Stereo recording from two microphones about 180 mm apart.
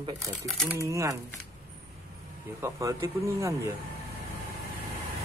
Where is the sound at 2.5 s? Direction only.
15° right (ahead or behind).